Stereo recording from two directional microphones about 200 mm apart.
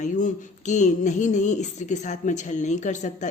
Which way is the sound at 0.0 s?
40° left (ahead or behind).